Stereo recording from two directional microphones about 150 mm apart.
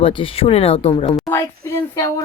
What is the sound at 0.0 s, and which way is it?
Speech, 35° left (ahead or behind).